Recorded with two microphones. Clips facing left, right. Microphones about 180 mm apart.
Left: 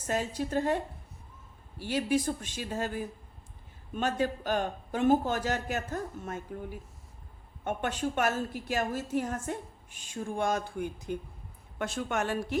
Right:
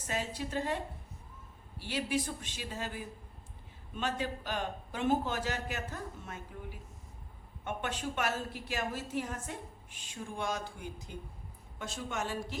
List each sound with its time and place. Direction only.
0.1 s a woman's voice: 45° left (ahead or behind)
1.8 s a woman's voice: 45° left (ahead or behind)